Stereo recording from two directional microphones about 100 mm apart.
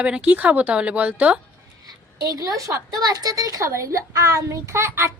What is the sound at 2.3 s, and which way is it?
A woman's voice, 35° right (ahead or behind).